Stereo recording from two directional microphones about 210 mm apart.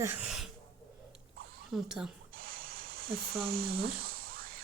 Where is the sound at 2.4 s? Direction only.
45° right (ahead or behind).